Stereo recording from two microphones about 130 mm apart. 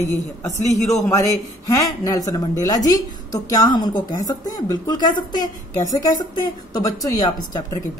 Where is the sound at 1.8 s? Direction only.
30° left (ahead or behind).